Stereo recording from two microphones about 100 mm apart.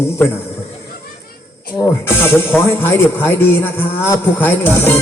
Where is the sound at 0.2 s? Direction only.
15° left (ahead or behind).